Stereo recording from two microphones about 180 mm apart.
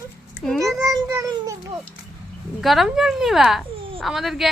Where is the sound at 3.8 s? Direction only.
30° right (ahead or behind).